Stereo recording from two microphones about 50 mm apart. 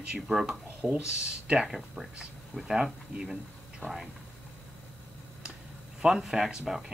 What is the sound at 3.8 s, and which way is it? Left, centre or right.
Speech, left.